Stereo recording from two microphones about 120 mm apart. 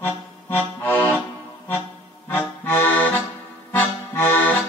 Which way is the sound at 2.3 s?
15° left (ahead or behind).